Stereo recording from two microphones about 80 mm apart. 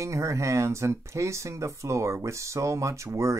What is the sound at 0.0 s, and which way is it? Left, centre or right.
Speech, right.